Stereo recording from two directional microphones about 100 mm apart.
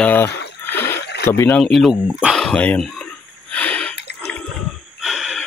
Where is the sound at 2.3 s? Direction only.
5° left (ahead or behind).